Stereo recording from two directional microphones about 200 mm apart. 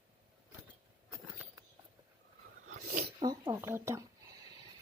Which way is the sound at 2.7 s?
40° right (ahead or behind).